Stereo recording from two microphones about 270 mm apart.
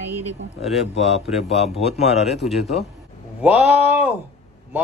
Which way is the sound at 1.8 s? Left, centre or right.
Left.